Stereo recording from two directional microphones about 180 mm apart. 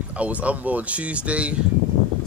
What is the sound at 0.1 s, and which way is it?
Speech, 5° right (ahead or behind).